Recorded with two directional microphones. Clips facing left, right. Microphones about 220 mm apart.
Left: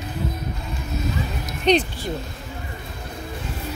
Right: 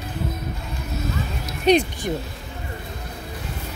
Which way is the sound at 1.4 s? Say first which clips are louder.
Right 2 dB; 10° right (ahead or behind).